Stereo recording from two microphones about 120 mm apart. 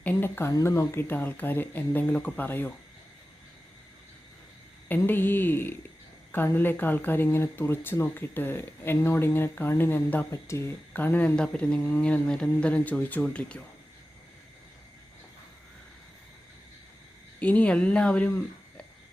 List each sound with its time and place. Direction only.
0.0 s speech: 15° left (ahead or behind)
4.9 s speech: 15° left (ahead or behind)
17.4 s speech: 10° left (ahead or behind)